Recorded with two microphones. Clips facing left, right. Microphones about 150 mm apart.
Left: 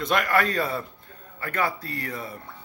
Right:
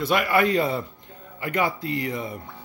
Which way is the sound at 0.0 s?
5° right (ahead or behind).